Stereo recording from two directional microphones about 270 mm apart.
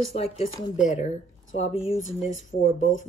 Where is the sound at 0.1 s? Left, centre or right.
Centre.